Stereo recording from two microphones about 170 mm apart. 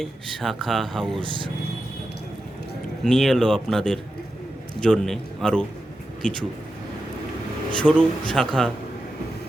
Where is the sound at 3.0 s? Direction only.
Centre (ahead or behind).